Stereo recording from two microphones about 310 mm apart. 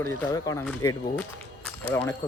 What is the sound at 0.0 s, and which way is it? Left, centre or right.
Speech, centre.